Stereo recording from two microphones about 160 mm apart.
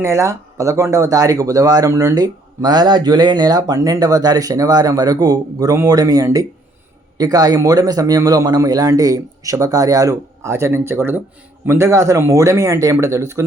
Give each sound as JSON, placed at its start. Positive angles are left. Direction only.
{"t": 0.0, "sound": "speech", "side_deg": -20}